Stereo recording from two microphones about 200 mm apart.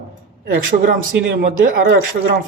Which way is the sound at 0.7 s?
35° right (ahead or behind).